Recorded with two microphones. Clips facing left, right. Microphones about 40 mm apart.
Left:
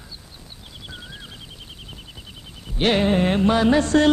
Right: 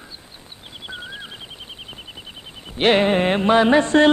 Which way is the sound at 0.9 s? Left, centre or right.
Right.